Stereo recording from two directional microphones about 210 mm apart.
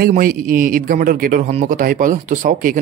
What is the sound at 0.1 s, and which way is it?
A man's voice, 40° right (ahead or behind).